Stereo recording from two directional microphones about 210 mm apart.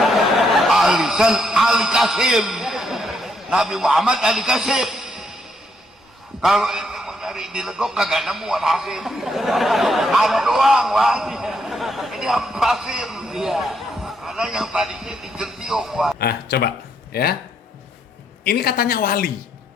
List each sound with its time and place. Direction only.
0.0 s chuckle: centre (ahead or behind)
6.4 s a man's voice: centre (ahead or behind)
16.1 s speech: 50° left (ahead or behind)
18.4 s a woman's voice: 45° left (ahead or behind)